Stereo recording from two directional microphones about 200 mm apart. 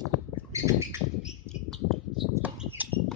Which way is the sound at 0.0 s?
15° right (ahead or behind).